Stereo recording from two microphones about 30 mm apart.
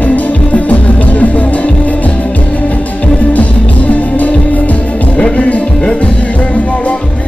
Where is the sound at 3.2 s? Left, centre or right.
Left.